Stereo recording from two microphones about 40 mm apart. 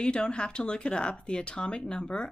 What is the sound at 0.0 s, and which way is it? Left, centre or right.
Speech, left.